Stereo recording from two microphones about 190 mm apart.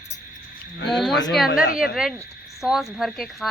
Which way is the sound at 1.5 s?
50° left (ahead or behind).